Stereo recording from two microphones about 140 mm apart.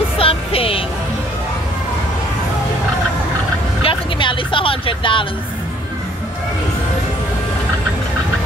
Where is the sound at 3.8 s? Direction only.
35° left (ahead or behind).